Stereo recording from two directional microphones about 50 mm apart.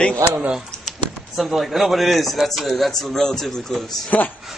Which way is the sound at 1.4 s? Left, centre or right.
Centre.